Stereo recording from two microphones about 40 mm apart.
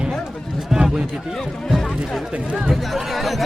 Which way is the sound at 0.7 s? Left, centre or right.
Centre.